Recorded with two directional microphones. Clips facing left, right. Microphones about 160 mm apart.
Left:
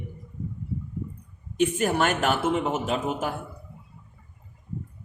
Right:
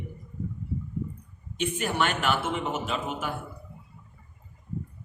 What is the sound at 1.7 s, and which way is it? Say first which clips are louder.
Speech: left 4 dB; 40° left (ahead or behind).